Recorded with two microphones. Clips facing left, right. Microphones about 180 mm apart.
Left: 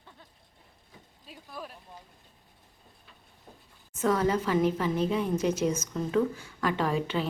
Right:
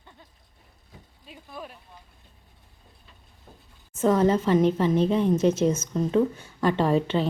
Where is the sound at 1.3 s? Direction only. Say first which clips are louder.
Right 2 dB; centre (ahead or behind).